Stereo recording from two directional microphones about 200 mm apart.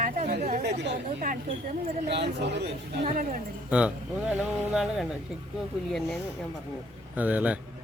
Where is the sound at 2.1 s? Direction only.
60° right (ahead or behind).